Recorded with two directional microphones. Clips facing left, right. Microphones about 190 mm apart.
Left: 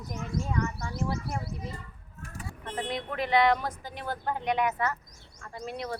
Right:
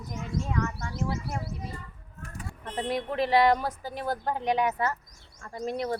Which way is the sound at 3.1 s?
35° right (ahead or behind).